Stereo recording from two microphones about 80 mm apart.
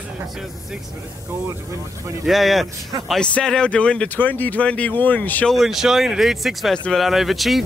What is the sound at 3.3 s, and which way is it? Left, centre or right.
Speech, centre.